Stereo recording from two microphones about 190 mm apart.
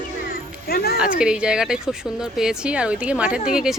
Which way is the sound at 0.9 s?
5° right (ahead or behind).